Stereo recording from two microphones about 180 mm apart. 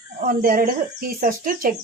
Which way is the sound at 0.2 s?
50° right (ahead or behind).